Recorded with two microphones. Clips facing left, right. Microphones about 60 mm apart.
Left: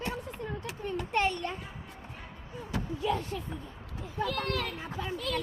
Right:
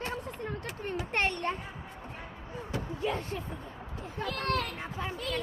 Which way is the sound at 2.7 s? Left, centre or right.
Right.